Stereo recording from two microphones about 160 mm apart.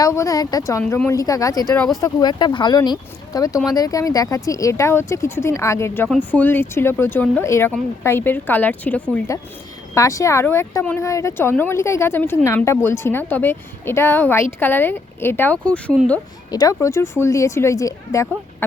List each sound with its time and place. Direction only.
0.0 s speech: 20° left (ahead or behind)
1.7 s speech: 5° left (ahead or behind)
2.0 s speech: 20° left (ahead or behind)
9.9 s speech: 20° left (ahead or behind)
16.5 s speech: 25° left (ahead or behind)